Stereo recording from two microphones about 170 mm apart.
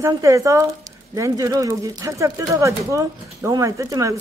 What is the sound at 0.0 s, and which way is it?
Speech, 15° right (ahead or behind).